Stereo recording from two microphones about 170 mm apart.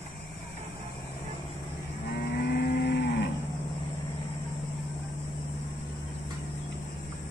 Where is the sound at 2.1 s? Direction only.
70° left (ahead or behind); by 3.3 s 85° left.